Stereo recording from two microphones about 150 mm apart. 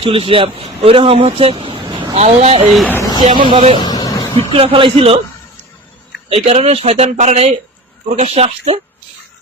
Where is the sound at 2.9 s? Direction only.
20° left (ahead or behind).